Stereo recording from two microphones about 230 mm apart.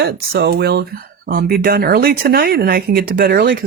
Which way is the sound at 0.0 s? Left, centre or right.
Right.